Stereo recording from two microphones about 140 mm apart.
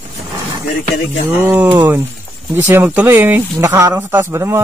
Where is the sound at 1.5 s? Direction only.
10° right (ahead or behind).